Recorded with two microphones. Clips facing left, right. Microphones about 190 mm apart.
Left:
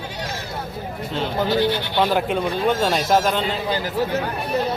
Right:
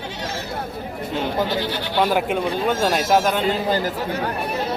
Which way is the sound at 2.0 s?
10° right (ahead or behind).